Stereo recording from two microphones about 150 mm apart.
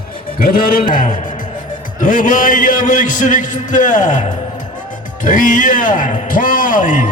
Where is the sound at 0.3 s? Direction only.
70° left (ahead or behind).